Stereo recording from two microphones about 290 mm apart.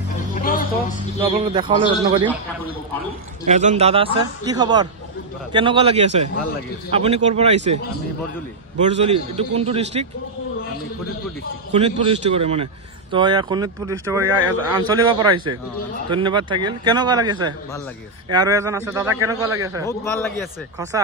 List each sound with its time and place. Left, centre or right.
0.3 s a sound: left
1.2 s a man's voice: centre
3.4 s a man's voice: right
8.8 s a man's voice: right
11.7 s a man's voice: centre